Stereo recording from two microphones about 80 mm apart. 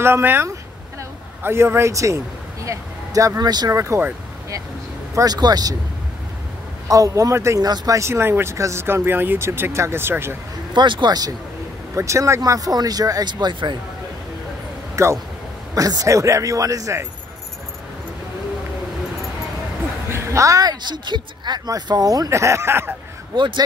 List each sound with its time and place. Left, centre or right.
0.0 s speech: right
3.7 s speech: right
5.1 s speech: right
6.9 s speech: right
7.6 s speech: right
10.7 s speech: right
11.9 s speech: right
15.0 s speech: right
20.1 s speech: right
21.6 s speech: right
23.3 s speech: right